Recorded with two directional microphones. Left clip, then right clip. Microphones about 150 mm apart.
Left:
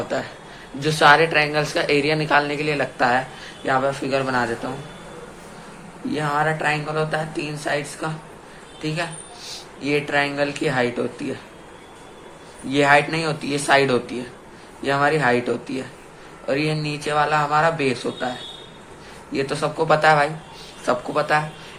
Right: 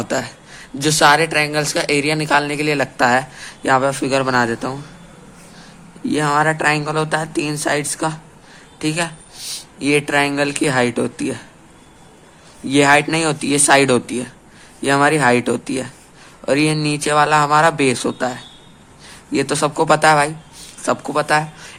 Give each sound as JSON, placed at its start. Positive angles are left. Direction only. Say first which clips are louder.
{"t": 0.8, "sound": "speech", "louder": "right 2 dB", "side_deg": -65}
{"t": 6.1, "sound": "speech", "louder": "right 5 dB", "side_deg": -75}
{"t": 12.6, "sound": "speech", "louder": "right 3 dB", "side_deg": -65}
{"t": 19.3, "sound": "speech", "louder": "right 5 dB", "side_deg": -70}